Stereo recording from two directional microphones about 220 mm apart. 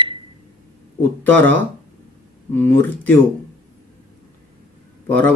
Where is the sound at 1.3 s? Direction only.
5° left (ahead or behind).